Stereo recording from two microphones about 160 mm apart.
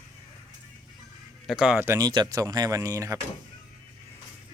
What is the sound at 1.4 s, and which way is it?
Speech, 5° right (ahead or behind).